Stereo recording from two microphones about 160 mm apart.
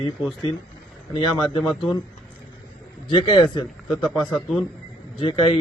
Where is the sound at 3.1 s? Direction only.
30° left (ahead or behind).